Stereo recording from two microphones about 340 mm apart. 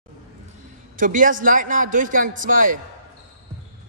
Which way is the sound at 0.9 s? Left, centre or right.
Right.